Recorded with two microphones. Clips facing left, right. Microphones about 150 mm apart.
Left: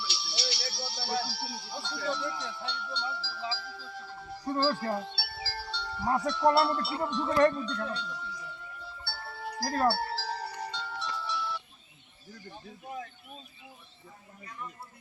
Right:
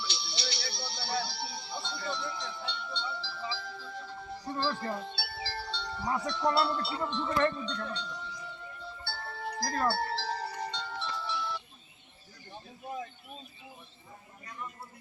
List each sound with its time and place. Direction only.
0.0 s music: 5° left (ahead or behind)
4.9 s chime: 10° left (ahead or behind)
6.1 s wind chime: 35° left (ahead or behind)
6.5 s music: 5° left (ahead or behind)
7.3 s wind chime: 35° left (ahead or behind)
7.6 s speech: 5° left (ahead or behind)
9.0 s music: 5° left (ahead or behind)